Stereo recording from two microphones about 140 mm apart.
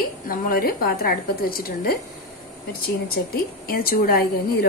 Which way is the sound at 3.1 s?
90° left.